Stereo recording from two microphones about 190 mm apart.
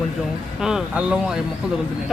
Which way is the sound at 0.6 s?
5° right (ahead or behind).